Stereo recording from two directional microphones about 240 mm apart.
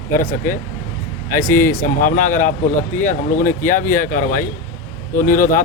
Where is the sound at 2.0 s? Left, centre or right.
Left.